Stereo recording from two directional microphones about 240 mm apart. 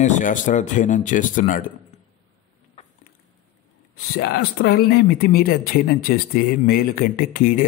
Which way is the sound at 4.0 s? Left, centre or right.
Left.